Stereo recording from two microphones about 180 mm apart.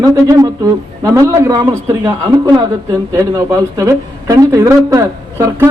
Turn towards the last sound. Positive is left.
turn(degrees=-15)  # may be behind; listen again after turning